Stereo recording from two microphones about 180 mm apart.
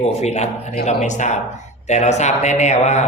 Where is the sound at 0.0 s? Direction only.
40° left (ahead or behind).